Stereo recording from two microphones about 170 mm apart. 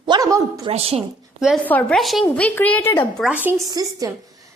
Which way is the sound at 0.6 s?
35° right (ahead or behind).